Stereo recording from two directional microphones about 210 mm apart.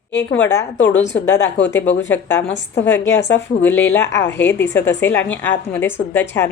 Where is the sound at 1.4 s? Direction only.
60° left (ahead or behind).